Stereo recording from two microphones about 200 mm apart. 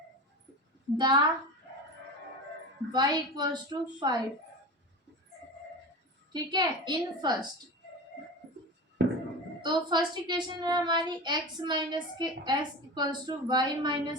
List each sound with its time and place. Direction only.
0.9 s a child's voice: 20° right (ahead or behind)
2.9 s a child's voice: 20° right (ahead or behind)
6.3 s a child's voice: 20° right (ahead or behind)
9.0 s a sound: 65° right (ahead or behind)
9.6 s a child's voice: 20° right (ahead or behind)